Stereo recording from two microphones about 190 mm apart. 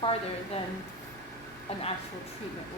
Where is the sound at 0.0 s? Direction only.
30° left (ahead or behind).